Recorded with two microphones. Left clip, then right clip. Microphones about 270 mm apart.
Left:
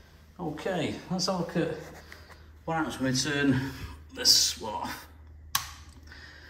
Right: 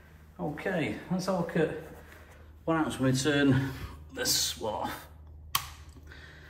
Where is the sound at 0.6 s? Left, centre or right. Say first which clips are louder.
Left 1 dB; left.